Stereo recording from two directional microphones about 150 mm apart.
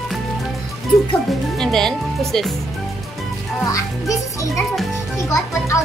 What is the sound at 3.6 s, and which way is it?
A child's voice, 20° left (ahead or behind).